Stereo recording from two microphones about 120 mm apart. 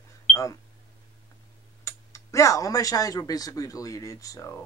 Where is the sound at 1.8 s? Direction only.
25° left (ahead or behind).